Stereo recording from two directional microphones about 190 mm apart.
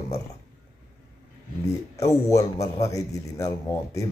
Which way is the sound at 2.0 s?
15° left (ahead or behind).